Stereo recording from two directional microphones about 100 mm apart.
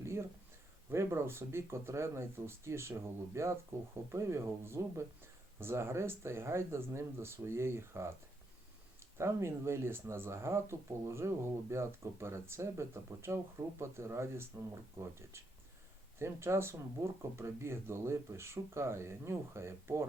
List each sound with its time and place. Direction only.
0.0 s a sound: 25° right (ahead or behind)
0.9 s speech: 25° right (ahead or behind)
16.1 s speech: 25° right (ahead or behind)